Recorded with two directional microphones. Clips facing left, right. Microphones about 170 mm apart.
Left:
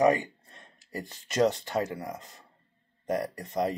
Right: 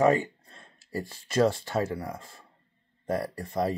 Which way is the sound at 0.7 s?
20° left (ahead or behind).